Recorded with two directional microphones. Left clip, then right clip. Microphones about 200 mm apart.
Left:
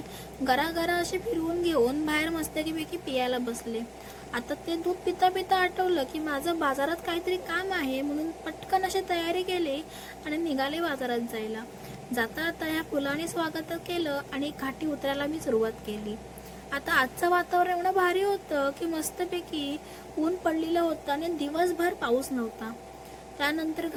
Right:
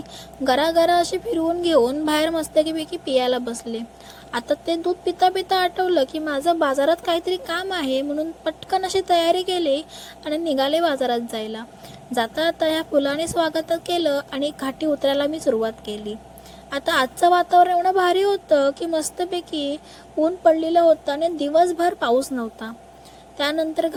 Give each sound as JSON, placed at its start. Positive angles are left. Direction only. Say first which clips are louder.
{"t": 0.4, "sound": "a woman's voice", "louder": "right 9 dB", "side_deg": -30}